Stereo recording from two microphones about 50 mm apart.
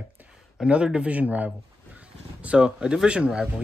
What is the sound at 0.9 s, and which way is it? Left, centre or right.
Speech, right.